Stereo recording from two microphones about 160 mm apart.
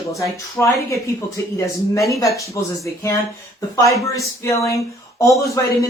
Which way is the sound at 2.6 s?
15° left (ahead or behind).